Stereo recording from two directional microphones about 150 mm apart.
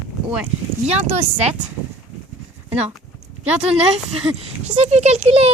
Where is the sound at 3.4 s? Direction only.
45° right (ahead or behind).